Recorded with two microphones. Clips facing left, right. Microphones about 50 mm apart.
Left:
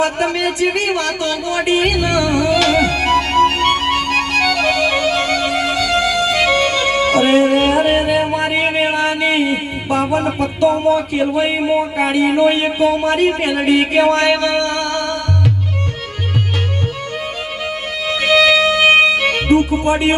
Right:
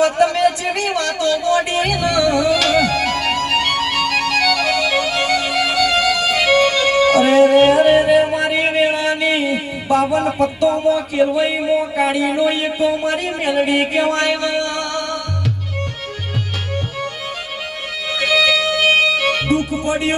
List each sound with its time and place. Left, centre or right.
0.0 s a sound: left
2.0 s music: left
4.6 s music: left
13.4 s a sound: left
14.2 s music: left
18.1 s music: left